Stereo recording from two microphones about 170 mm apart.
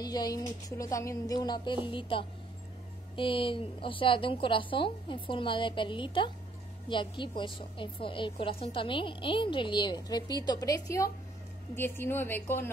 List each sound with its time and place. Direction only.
0.0 s a woman's voice: 25° left (ahead or behind)